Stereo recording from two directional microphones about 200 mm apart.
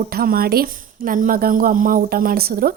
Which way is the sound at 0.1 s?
50° right (ahead or behind).